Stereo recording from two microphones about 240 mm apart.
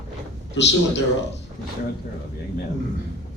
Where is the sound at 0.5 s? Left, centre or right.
Left.